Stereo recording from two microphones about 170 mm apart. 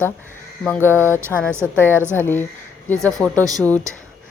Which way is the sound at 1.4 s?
15° right (ahead or behind).